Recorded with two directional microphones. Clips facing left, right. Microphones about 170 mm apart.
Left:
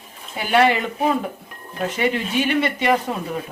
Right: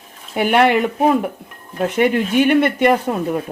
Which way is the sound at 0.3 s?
60° right (ahead or behind).